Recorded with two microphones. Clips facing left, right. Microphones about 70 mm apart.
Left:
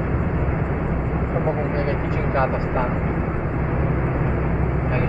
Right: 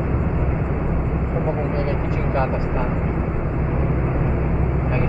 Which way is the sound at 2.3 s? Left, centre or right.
Left.